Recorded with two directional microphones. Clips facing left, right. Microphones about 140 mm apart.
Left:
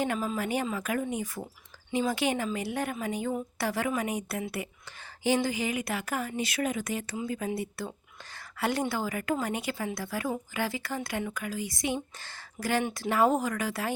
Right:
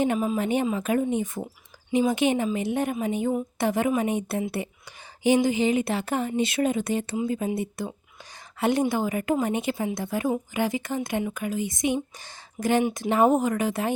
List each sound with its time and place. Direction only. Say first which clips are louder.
0.0 s a woman's voice: right 6 dB; 20° right (ahead or behind)